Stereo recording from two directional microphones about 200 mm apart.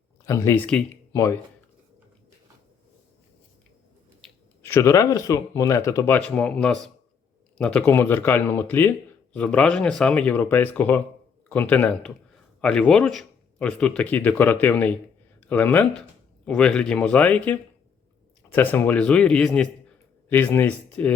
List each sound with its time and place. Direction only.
0.3 s speech: 15° left (ahead or behind)
4.6 s speech: 15° left (ahead or behind)